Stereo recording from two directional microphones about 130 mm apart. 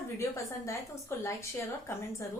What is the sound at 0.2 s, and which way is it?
A woman's voice, 25° left (ahead or behind).